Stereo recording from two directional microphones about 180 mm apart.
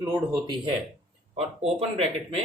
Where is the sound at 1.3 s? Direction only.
35° right (ahead or behind).